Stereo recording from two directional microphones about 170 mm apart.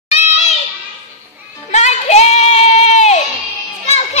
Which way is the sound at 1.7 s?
40° left (ahead or behind).